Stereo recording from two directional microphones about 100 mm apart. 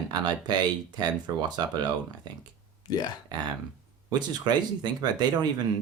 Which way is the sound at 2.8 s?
45° left (ahead or behind).